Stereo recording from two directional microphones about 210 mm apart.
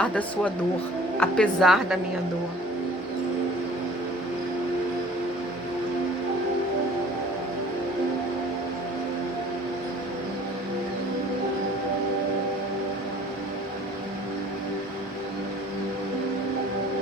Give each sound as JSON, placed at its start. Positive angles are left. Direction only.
{"t": 0.0, "sound": "speech", "side_deg": 5}